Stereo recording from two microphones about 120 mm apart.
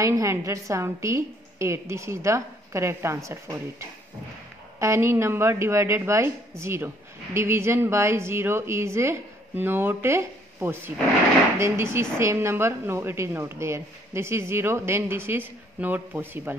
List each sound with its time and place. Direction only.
0.0 s a woman's voice: 25° right (ahead or behind)
4.7 s a woman's voice: 25° right (ahead or behind)